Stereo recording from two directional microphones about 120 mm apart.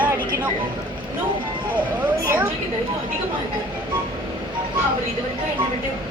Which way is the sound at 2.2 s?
20° right (ahead or behind).